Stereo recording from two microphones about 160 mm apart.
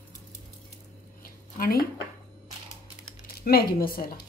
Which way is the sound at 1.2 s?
65° left (ahead or behind).